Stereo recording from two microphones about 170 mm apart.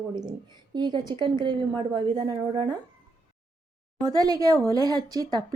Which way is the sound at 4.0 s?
20° right (ahead or behind).